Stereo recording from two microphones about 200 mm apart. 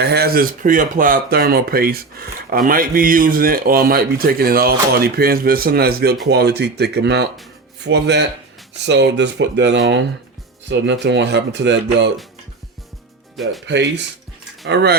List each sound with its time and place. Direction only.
0.0 s speech: 55° right (ahead or behind)
11.0 s speech: 60° right (ahead or behind)
13.3 s speech: centre (ahead or behind)
13.7 s speech: 60° right (ahead or behind)